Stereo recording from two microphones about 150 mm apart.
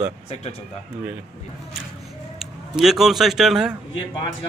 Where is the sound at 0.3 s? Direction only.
45° left (ahead or behind).